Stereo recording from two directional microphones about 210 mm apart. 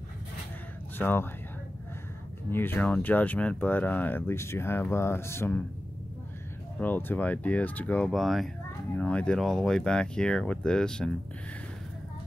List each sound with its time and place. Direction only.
0.9 s speech: 10° left (ahead or behind)
2.5 s speech: 10° left (ahead or behind)
6.8 s speech: 10° left (ahead or behind)